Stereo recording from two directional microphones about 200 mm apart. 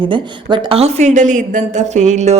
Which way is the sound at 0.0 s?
25° right (ahead or behind).